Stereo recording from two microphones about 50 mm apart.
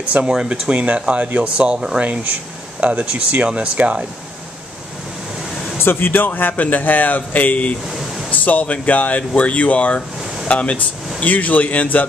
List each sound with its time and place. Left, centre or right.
0.2 s speech: centre
5.8 s speech: left